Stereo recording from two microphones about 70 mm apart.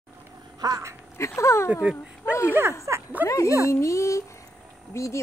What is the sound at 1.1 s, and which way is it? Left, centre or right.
Speech, left.